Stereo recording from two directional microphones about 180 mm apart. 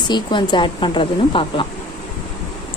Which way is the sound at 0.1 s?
25° left (ahead or behind).